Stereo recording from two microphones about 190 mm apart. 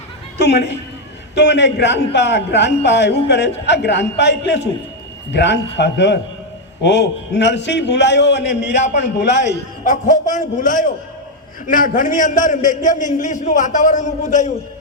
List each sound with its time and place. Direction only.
0.3 s a man's voice: 65° left (ahead or behind)
9.8 s a man's voice: 40° left (ahead or behind)